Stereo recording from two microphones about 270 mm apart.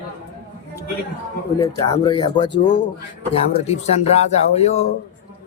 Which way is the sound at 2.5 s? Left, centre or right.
Left.